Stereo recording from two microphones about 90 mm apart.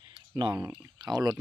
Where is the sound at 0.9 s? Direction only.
45° right (ahead or behind).